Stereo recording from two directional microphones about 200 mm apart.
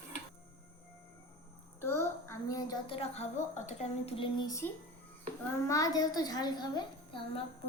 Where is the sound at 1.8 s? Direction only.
10° left (ahead or behind).